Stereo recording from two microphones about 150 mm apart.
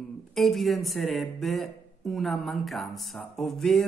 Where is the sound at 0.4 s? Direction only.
Centre (ahead or behind).